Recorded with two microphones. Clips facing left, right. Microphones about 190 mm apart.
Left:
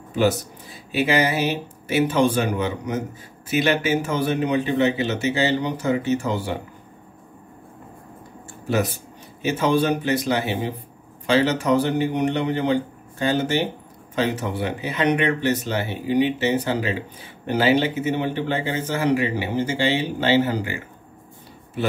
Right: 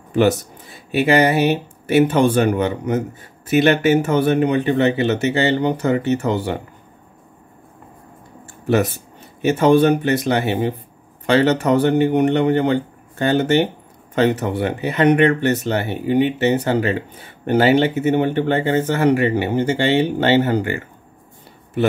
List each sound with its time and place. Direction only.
0.1 s speech: 55° right (ahead or behind)
9.4 s speech: 60° right (ahead or behind)